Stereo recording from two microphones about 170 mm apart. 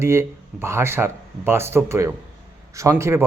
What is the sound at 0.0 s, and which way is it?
Speech, 15° right (ahead or behind).